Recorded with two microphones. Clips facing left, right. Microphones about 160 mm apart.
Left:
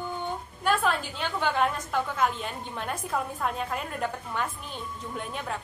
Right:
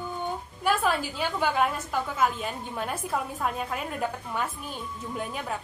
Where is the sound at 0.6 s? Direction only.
5° right (ahead or behind).